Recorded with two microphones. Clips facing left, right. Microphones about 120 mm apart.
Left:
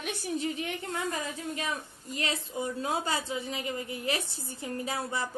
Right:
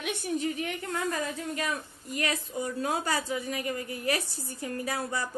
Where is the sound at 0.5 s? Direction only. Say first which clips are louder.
Right 1 dB; 25° left (ahead or behind).